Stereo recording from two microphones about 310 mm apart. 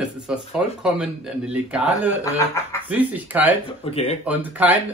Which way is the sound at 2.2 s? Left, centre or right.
Centre.